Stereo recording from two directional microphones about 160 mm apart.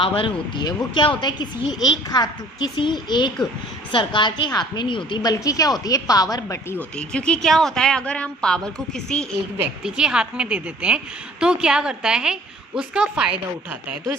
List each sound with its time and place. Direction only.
0.0 s a woman's voice: 35° left (ahead or behind)
6.9 s a woman's voice: 5° left (ahead or behind)